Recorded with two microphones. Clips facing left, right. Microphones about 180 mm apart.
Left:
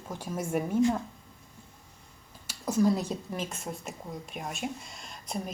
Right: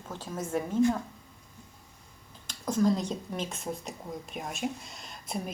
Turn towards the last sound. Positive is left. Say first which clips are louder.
# even
turn(degrees=-5)  # may be behind; listen again after turning